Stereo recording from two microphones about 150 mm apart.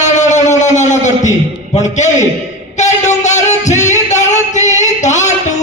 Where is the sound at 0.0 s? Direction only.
50° left (ahead or behind).